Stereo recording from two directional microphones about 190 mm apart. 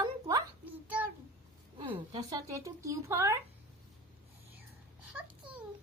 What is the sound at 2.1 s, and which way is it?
Speech, 20° right (ahead or behind).